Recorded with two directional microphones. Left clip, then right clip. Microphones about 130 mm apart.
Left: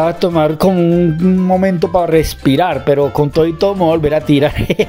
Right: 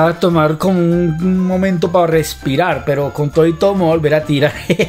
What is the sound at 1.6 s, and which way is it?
Speech, 55° left (ahead or behind).